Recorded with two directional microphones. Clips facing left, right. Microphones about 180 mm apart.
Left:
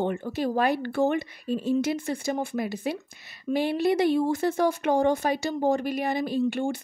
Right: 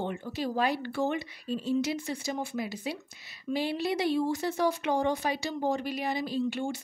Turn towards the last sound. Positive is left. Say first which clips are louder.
# left 5 dB
turn(degrees=55)  # may be behind; listen again after turning